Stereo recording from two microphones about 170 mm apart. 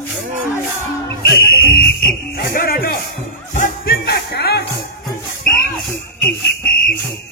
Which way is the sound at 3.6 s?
60° left (ahead or behind).